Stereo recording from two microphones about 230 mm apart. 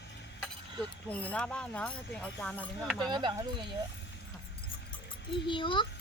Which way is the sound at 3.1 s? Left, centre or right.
Centre.